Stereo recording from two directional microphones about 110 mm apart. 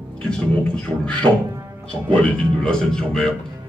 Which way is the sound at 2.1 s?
10° left (ahead or behind).